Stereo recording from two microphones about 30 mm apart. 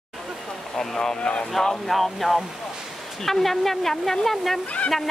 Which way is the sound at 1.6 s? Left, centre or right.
Centre.